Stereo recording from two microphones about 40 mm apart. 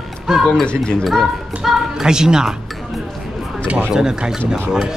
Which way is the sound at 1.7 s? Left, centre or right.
Centre.